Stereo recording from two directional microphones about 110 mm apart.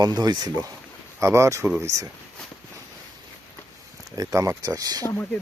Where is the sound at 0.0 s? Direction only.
40° right (ahead or behind).